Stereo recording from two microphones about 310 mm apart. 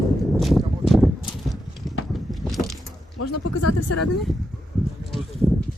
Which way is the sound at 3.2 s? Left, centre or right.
Left.